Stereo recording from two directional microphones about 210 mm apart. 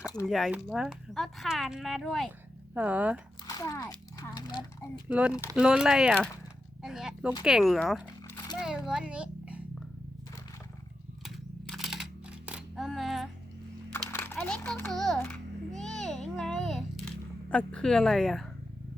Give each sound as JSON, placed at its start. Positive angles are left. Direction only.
{"t": 0.0, "sound": "speech", "side_deg": 15}
{"t": 0.3, "sound": "speech", "side_deg": 0}
{"t": 3.4, "sound": "a child's voice", "side_deg": 15}
{"t": 5.0, "sound": "a child's voice", "side_deg": -5}
{"t": 11.2, "sound": "camera", "side_deg": 0}
{"t": 12.5, "sound": "a sound", "side_deg": -5}
{"t": 13.9, "sound": "music", "side_deg": 10}
{"t": 16.0, "sound": "a sound", "side_deg": 0}